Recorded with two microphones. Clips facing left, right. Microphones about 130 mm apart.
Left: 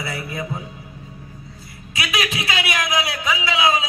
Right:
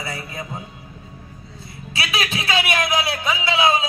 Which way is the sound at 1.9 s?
30° right (ahead or behind).